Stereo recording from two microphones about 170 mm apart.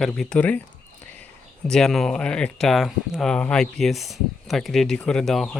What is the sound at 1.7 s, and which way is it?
Speech, 5° left (ahead or behind).